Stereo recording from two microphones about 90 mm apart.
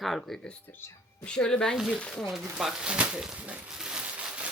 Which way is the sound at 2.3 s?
5° right (ahead or behind).